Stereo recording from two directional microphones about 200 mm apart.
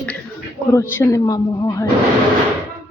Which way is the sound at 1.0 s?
15° left (ahead or behind).